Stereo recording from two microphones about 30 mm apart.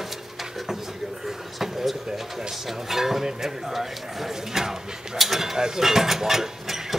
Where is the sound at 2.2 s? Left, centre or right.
Centre.